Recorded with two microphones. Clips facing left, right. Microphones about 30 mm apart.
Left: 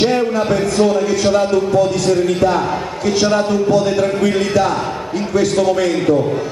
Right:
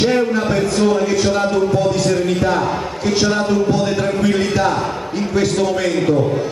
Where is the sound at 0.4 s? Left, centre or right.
Centre.